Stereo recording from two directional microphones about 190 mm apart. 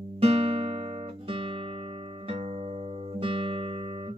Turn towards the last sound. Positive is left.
turn(degrees=-30)  # may be behind; listen again after turning